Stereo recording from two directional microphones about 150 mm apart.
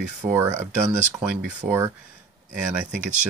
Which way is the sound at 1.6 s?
15° right (ahead or behind).